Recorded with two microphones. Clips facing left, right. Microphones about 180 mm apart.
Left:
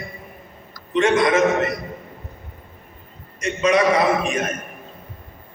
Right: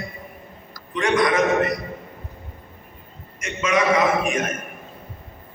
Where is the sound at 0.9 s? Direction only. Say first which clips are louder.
Left 3 dB; 25° left (ahead or behind).